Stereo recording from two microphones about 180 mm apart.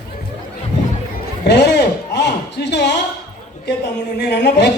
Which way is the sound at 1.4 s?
70° left (ahead or behind).